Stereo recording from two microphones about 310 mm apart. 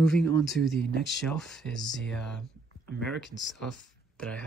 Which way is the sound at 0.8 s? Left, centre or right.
Left.